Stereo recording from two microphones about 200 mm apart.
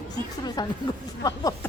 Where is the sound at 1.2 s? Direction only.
20° left (ahead or behind).